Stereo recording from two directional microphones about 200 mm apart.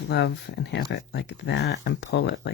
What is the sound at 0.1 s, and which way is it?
Speech, 55° left (ahead or behind).